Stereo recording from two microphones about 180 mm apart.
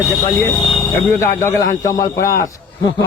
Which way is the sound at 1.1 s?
15° left (ahead or behind).